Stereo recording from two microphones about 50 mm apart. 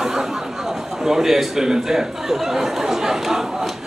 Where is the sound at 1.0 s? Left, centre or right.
Centre.